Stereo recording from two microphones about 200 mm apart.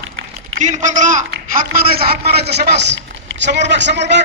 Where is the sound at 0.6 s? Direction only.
35° right (ahead or behind).